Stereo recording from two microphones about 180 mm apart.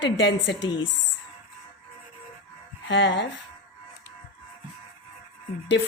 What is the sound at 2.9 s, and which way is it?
Speech, 80° left.